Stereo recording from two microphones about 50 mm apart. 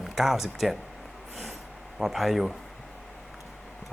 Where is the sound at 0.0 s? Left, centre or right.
Centre.